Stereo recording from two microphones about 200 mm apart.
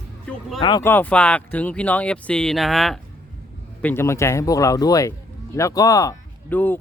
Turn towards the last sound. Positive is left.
turn(degrees=10)  # may be behind; listen again after turning